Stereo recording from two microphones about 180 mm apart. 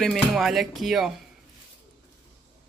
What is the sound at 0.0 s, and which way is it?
A woman's voice, centre (ahead or behind).